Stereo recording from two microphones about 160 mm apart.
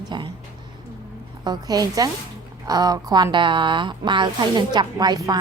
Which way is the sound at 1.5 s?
25° right (ahead or behind).